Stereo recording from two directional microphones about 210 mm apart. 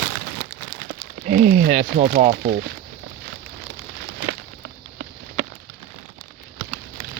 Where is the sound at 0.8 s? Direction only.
45° right (ahead or behind).